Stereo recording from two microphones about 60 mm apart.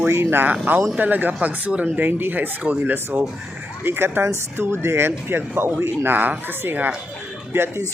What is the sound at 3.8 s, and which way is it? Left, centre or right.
Speech, right.